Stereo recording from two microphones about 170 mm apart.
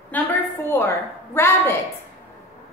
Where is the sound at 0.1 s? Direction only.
10° left (ahead or behind).